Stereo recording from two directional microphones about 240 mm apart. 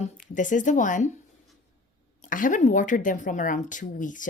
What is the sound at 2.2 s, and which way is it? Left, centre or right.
Speech, left.